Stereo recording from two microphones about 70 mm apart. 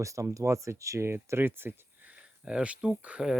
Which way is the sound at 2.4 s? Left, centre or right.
Centre.